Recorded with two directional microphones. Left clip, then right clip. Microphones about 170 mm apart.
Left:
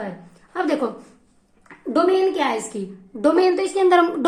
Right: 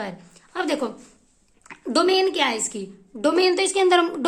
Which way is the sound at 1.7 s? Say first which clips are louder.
Left 1 dB; 45° right (ahead or behind).